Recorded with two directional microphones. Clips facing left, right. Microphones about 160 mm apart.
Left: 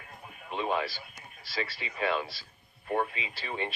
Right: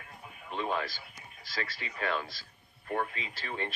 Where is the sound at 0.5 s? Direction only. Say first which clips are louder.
Left 2 dB; 15° left (ahead or behind).